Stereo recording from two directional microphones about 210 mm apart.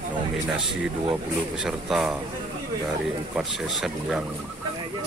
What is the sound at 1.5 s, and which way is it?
Speech, centre (ahead or behind).